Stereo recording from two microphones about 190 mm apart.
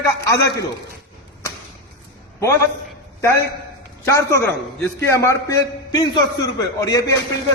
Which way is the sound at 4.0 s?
15° left (ahead or behind).